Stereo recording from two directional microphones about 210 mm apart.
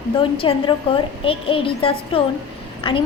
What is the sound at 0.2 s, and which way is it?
A woman's voice, 25° left (ahead or behind).